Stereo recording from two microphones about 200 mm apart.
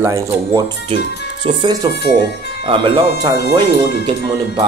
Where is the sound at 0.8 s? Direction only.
25° right (ahead or behind).